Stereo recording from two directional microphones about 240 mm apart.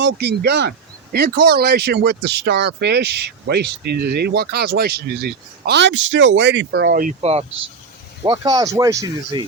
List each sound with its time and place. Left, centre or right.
0.0 s speech: right
7.0 s speech: right